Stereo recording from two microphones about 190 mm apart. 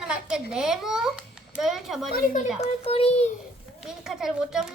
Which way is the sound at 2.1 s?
45° left (ahead or behind).